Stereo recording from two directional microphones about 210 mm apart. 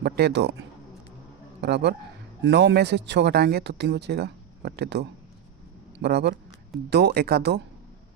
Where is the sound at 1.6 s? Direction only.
55° right (ahead or behind).